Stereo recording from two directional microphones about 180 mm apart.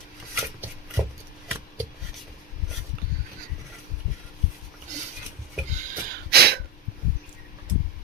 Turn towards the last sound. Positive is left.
turn(degrees=-60)  # may be behind; listen again after turning